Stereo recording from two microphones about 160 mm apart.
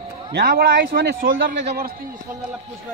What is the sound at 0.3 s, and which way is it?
A man's voice, 75° right (ahead or behind).